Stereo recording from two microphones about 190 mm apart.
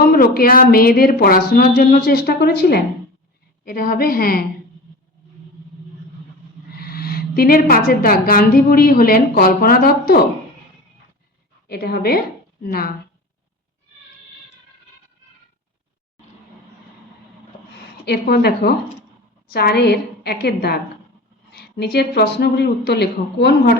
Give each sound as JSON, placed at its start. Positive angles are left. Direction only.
{"t": 0.0, "sound": "a sound", "side_deg": 50}
{"t": 0.3, "sound": "a woman's voice", "side_deg": 50}
{"t": 6.7, "sound": "a woman's voice", "side_deg": 55}
{"t": 11.7, "sound": "a woman's voice", "side_deg": 55}
{"t": 18.0, "sound": "a woman's voice", "side_deg": 55}